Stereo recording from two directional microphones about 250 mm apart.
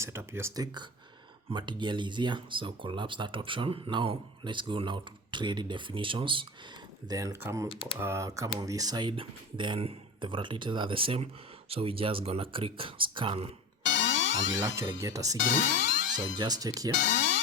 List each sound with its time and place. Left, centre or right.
0.0 s speech: centre
13.8 s music: left
15.0 s speech: centre
15.4 s speech: left
16.4 s speech: centre
17.1 s music: left